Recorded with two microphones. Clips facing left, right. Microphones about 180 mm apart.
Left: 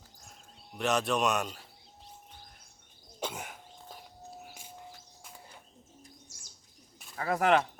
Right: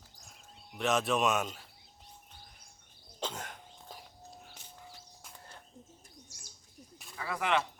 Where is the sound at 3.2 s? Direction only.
10° left (ahead or behind).